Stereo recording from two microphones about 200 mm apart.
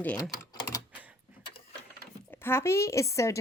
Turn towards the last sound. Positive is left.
turn(degrees=15)  # may be behind; listen again after turning